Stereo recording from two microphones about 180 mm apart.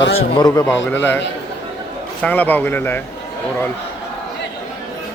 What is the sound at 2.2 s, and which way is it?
Speech, 10° left (ahead or behind).